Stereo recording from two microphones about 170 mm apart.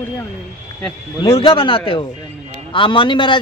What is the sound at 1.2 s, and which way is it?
A man's voice, 30° left (ahead or behind).